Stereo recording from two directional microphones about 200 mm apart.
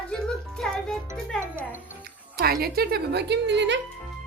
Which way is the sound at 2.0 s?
50° right (ahead or behind).